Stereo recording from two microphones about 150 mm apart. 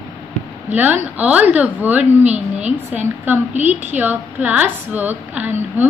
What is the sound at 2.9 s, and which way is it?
A woman's voice, 10° right (ahead or behind).